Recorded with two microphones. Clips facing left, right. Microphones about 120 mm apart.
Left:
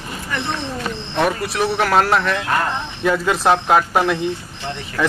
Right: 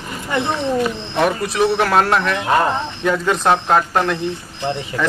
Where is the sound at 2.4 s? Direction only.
25° right (ahead or behind).